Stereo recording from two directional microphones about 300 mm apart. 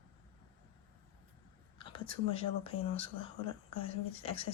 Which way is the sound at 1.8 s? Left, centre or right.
Centre.